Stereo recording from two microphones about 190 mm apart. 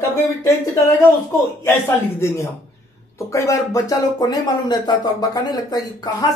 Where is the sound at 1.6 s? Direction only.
10° left (ahead or behind).